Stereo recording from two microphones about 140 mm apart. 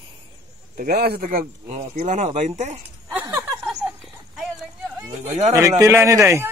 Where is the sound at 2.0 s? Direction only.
60° right (ahead or behind).